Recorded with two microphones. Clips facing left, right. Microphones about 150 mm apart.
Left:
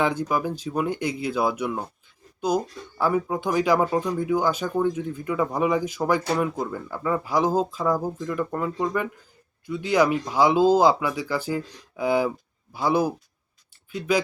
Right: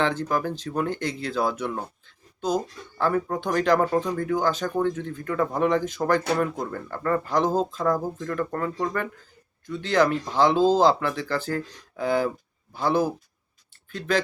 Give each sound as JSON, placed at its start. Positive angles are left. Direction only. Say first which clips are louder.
{"t": 0.0, "sound": "speech", "louder": "left 1 dB", "side_deg": 10}